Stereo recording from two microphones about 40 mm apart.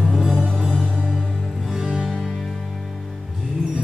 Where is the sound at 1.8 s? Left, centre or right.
Right.